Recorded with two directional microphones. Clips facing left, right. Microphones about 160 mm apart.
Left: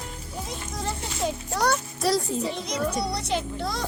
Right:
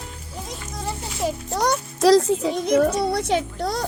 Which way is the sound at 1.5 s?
15° right (ahead or behind).